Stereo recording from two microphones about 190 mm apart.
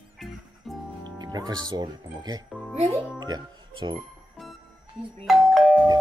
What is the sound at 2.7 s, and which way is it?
Speech, 35° right (ahead or behind).